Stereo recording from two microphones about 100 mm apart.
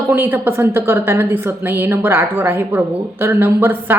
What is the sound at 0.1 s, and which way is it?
A woman's voice, 20° right (ahead or behind).